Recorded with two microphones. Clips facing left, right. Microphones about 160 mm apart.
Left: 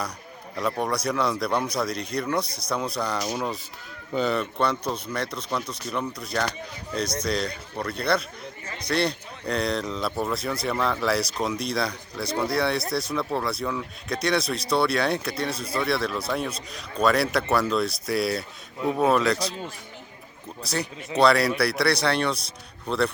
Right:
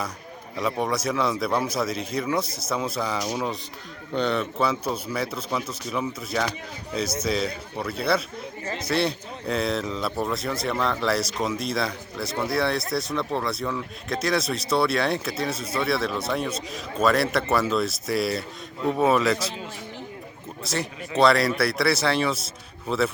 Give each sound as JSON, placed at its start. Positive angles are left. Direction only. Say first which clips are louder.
{"t": 0.5, "sound": "speech", "louder": "right 1 dB", "side_deg": 0}
{"t": 20.7, "sound": "speech", "louder": "even", "side_deg": 0}